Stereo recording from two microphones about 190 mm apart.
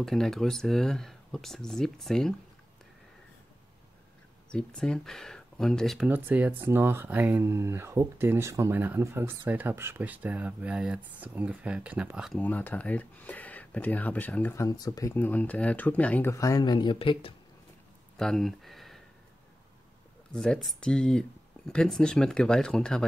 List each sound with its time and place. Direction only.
0.0 s speech: centre (ahead or behind)
4.5 s speech: 5° left (ahead or behind)
12.4 s speech: 10° left (ahead or behind); by 17.3 s 25° left (ahead or behind)
18.1 s speech: centre (ahead or behind)
20.3 s speech: 5° left (ahead or behind)